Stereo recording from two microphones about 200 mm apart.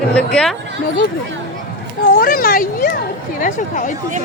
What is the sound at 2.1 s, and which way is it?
Speech, 45° left (ahead or behind).